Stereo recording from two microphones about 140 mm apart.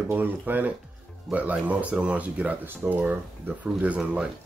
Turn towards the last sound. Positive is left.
turn(degrees=-10)  # may be behind; listen again after turning